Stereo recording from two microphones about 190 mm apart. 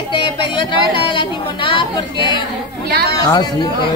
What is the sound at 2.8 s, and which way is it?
Speech, 55° right (ahead or behind).